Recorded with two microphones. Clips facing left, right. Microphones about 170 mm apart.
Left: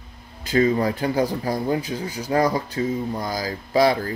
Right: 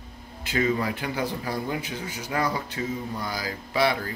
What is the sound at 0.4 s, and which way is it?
Speech, 35° left (ahead or behind).